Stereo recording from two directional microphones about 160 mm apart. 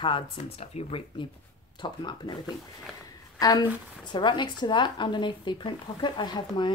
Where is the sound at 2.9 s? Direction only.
Centre (ahead or behind).